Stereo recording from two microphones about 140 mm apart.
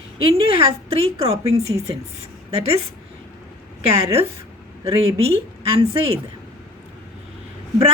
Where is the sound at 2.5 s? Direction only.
45° right (ahead or behind).